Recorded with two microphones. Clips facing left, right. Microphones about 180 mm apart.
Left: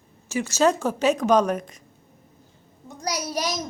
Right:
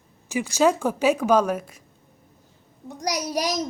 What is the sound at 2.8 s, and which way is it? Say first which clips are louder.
Speech: right 2 dB; 15° right (ahead or behind).